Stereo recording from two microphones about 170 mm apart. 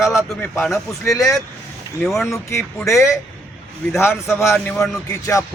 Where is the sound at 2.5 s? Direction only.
15° left (ahead or behind).